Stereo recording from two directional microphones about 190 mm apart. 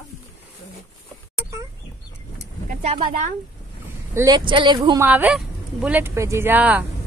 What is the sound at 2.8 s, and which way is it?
Speech, 30° right (ahead or behind).